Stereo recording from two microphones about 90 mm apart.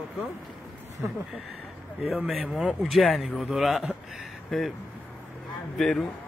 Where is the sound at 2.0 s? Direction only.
Centre (ahead or behind).